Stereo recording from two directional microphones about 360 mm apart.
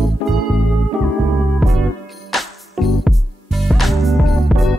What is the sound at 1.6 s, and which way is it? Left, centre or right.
Music, centre.